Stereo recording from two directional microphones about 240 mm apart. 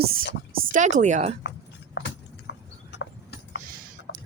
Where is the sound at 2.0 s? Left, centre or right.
Left.